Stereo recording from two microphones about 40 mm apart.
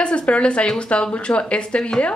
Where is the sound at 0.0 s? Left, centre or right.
Left.